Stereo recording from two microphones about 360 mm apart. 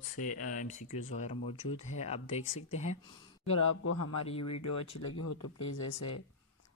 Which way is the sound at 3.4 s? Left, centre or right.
Left.